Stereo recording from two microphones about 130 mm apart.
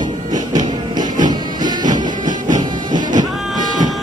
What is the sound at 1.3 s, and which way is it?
Music, 35° right (ahead or behind).